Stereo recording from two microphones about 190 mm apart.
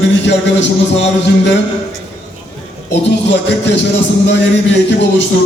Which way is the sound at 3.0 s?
65° left (ahead or behind).